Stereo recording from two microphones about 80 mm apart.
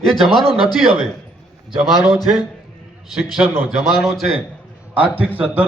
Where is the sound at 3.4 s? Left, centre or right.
Centre.